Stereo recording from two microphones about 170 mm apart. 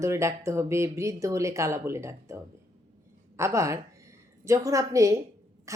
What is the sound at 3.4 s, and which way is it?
A woman's voice, 15° right (ahead or behind).